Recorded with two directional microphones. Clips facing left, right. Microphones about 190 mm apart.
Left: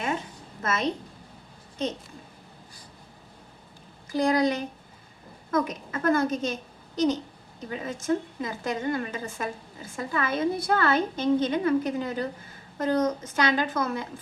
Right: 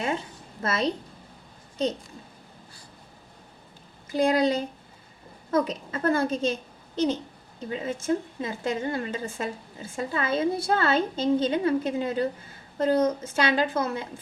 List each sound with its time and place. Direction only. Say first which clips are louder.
0.6 s a woman's voice: right 2 dB; 30° right (ahead or behind)
4.1 s a woman's voice: right 1 dB; 25° right (ahead or behind)